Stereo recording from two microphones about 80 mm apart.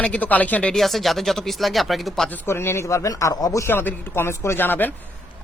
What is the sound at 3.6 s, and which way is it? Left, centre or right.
Speech, left.